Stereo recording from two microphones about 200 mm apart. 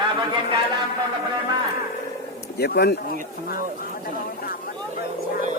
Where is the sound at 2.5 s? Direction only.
55° left (ahead or behind).